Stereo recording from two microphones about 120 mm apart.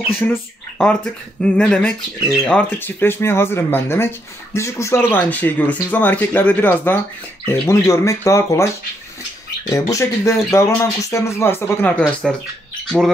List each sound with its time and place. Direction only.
0.1 s speech: 10° left (ahead or behind)
2.8 s speech: 20° left (ahead or behind)
9.7 s speech: 25° left (ahead or behind)
12.2 s speech: centre (ahead or behind)